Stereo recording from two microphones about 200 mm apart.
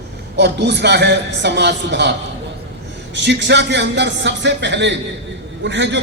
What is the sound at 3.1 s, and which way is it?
A man's voice, 60° right (ahead or behind).